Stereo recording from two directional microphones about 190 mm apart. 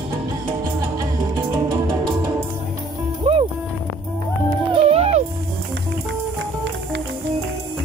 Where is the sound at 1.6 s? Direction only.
25° right (ahead or behind).